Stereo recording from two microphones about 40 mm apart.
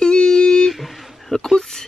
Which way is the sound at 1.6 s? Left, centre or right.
Centre.